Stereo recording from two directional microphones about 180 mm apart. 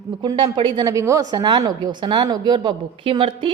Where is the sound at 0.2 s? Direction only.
25° right (ahead or behind).